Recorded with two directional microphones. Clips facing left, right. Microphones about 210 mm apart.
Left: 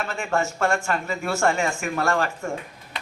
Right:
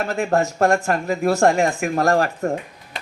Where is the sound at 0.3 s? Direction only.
35° right (ahead or behind).